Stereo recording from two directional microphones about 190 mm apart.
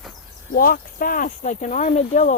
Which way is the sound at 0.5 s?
50° left (ahead or behind).